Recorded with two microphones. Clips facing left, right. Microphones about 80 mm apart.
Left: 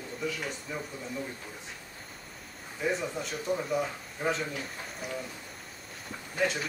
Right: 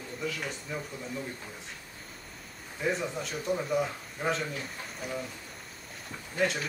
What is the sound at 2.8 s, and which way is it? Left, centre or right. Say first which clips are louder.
Speech: even; centre.